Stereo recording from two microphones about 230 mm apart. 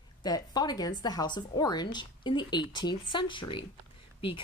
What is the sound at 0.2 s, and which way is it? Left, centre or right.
A woman's voice, centre.